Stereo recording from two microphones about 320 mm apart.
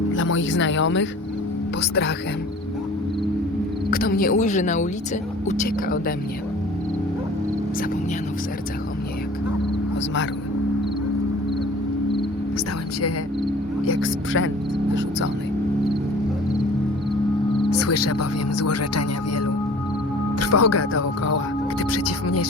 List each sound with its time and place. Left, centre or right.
0.1 s speech: left
3.9 s speech: left
13.8 s speech: left
17.7 s speech: left